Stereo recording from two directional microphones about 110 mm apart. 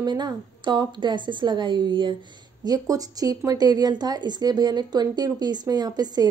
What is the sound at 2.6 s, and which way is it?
A woman's voice, 35° right (ahead or behind).